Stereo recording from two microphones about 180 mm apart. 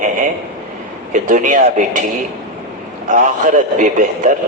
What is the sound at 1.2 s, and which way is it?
Speech, 45° right (ahead or behind).